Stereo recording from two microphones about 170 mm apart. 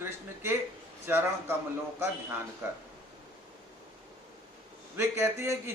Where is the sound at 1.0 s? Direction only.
15° right (ahead or behind).